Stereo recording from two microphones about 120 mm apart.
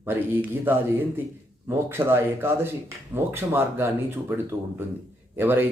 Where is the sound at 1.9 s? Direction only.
20° right (ahead or behind).